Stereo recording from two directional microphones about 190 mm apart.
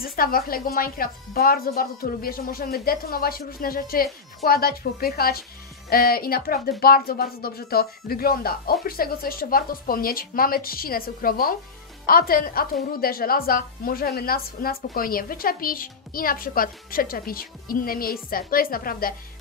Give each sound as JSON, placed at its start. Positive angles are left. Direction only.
{"t": 0.0, "sound": "a woman's voice", "side_deg": 50}